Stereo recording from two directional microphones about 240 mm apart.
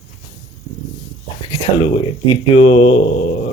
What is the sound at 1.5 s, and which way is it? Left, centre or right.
Speech, centre.